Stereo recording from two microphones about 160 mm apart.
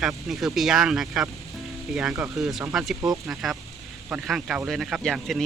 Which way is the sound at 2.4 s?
Centre (ahead or behind).